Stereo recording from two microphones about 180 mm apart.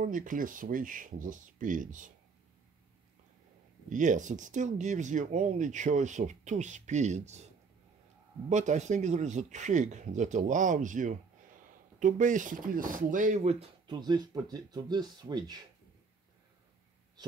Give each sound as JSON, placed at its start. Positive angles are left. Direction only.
{"t": 0.0, "sound": "speech", "side_deg": -45}
{"t": 3.9, "sound": "speech", "side_deg": -45}
{"t": 8.5, "sound": "speech", "side_deg": -40}